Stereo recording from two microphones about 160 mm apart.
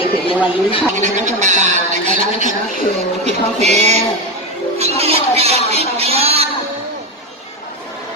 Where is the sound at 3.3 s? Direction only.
45° right (ahead or behind).